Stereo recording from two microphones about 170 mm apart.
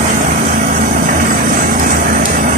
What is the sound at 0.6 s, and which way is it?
Vehicle, 55° right (ahead or behind).